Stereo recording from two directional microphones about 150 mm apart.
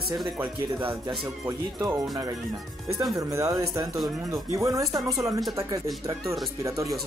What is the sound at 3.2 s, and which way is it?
Speech, 20° right (ahead or behind).